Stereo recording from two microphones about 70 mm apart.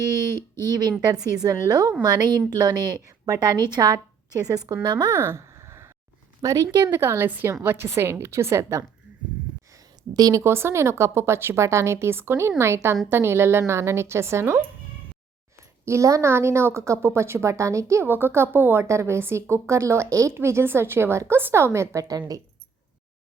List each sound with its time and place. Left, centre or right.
0.6 s a woman's voice: right
2.6 s a woman's voice: right
5.1 s a sound: right
6.4 s a woman's voice: right
6.9 s a woman's voice: right
7.3 s a woman's voice: right
10.2 s a woman's voice: right
10.4 s a woman's voice: right
15.8 s a woman's voice: right
18.0 s a woman's voice: right